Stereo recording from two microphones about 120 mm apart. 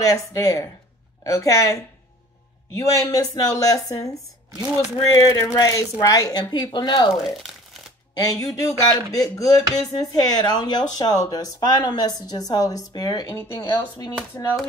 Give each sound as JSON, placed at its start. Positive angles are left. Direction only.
{"t": 0.0, "sound": "speech", "side_deg": 30}
{"t": 8.2, "sound": "speech", "side_deg": 30}